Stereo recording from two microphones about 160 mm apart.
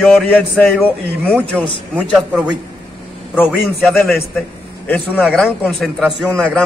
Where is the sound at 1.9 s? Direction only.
5° right (ahead or behind).